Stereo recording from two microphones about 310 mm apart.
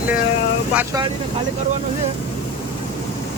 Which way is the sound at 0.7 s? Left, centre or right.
Centre.